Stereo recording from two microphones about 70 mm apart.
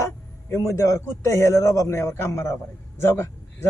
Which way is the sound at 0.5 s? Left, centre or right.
Left.